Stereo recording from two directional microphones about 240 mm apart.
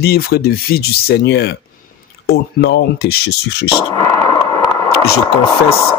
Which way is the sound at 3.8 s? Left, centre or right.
Centre.